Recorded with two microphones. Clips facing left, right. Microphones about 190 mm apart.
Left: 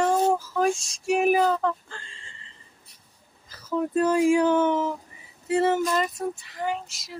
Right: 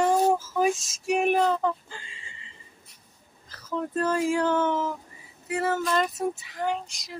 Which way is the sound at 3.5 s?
10° left (ahead or behind).